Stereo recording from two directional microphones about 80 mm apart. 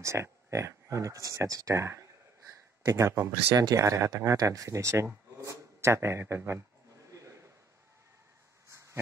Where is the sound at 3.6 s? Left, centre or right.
Right.